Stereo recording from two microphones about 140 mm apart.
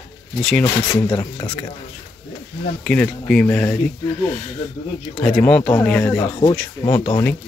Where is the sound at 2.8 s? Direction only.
10° left (ahead or behind).